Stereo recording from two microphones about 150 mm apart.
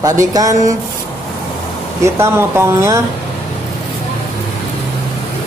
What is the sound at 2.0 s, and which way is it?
Speech, 15° right (ahead or behind).